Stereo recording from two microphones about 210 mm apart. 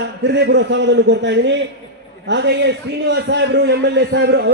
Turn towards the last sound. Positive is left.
turn(degrees=-55)  # may be behind; listen again after turning